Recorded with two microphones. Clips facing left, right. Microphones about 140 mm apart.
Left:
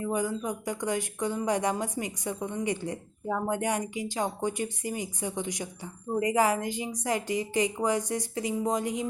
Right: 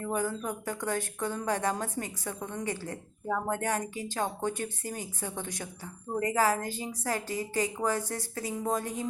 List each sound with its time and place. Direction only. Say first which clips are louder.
0.0 s speech: left 2 dB; 15° left (ahead or behind)